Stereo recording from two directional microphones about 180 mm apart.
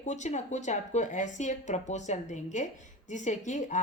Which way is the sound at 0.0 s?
40° left (ahead or behind).